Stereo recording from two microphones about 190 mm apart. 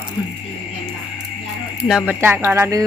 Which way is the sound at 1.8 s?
5° right (ahead or behind).